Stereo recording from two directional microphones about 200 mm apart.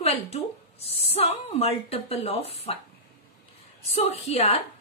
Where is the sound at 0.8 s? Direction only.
30° left (ahead or behind).